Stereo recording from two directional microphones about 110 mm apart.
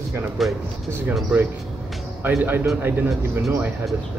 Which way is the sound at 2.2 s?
20° right (ahead or behind).